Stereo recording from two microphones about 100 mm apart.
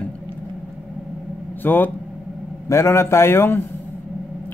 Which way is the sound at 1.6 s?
20° left (ahead or behind).